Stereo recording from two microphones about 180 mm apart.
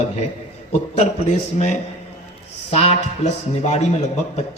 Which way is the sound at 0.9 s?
40° left (ahead or behind).